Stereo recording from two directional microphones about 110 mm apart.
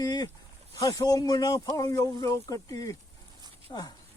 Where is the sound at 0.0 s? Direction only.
35° left (ahead or behind).